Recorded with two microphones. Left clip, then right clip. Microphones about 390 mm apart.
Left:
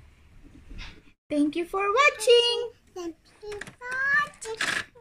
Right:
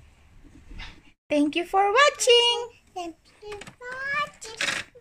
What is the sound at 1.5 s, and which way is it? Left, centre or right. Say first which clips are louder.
Speech: right 4 dB; centre.